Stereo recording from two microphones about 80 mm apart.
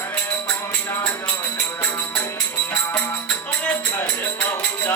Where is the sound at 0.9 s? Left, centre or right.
Left.